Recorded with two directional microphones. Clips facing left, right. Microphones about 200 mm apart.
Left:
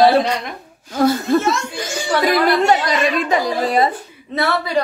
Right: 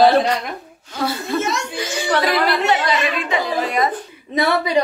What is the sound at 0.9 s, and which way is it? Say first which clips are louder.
Speech: left 7 dB; 45° left (ahead or behind).